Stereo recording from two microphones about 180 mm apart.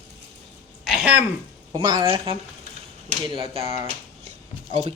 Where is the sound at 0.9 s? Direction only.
5° right (ahead or behind).